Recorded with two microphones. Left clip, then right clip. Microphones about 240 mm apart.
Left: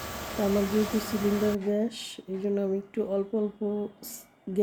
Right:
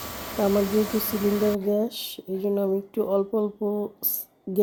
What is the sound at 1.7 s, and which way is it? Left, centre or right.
Speech, centre.